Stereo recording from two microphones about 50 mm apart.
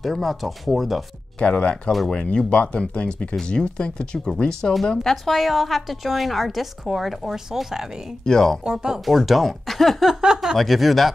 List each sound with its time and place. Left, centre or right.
0.0 s a woman's voice: centre
1.4 s speech: centre
1.9 s a woman's voice: centre
2.1 s a woman's voice: left; by 7.9 s centre
8.2 s speech: centre
8.6 s a woman's voice: centre